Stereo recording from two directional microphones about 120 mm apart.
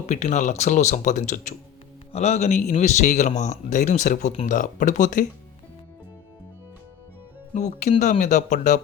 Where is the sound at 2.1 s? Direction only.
65° left (ahead or behind); by 5.3 s 90° left.